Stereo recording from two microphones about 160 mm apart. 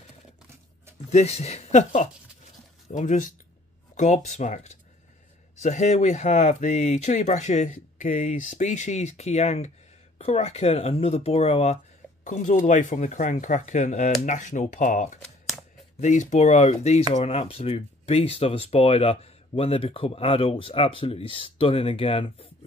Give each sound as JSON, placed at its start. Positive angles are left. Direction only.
{"t": 1.1, "sound": "speech", "side_deg": 40}
{"t": 12.3, "sound": "speech", "side_deg": 50}